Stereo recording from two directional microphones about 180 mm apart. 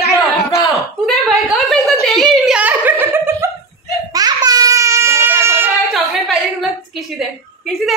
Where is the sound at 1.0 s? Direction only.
Centre (ahead or behind); by 5.7 s 15° right (ahead or behind).